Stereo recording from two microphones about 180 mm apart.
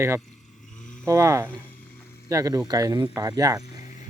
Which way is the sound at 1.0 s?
15° right (ahead or behind).